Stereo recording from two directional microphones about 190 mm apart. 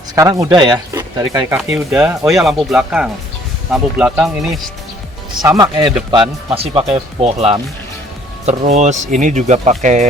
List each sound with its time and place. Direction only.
0.2 s speech: 15° right (ahead or behind)
1.7 s speech: 5° right (ahead or behind)
5.4 s speech: 20° right (ahead or behind); by 10.1 s 40° right (ahead or behind)